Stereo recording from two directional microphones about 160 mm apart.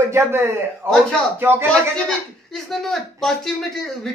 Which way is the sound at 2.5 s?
Centre (ahead or behind).